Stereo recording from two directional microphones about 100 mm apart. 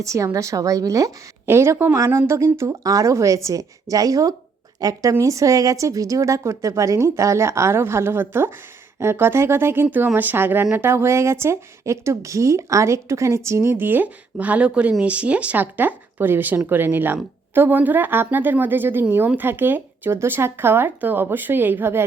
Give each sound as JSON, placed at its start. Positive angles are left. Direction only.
{"t": 0.0, "sound": "a woman's voice", "side_deg": -30}